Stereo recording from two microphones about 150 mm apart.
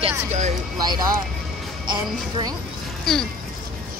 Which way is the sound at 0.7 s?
30° right (ahead or behind).